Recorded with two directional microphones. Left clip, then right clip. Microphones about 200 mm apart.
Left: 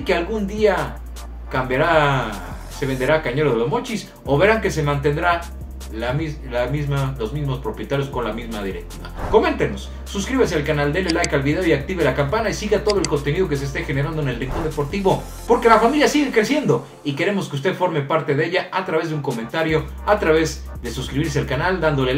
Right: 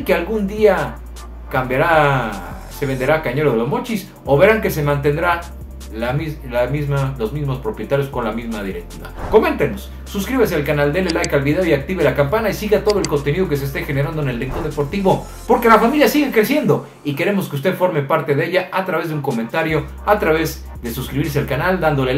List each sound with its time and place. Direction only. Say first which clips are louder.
0.0 s a man's voice: right 3 dB; 5° right (ahead or behind)